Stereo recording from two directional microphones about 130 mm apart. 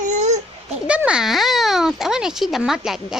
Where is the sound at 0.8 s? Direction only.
10° right (ahead or behind).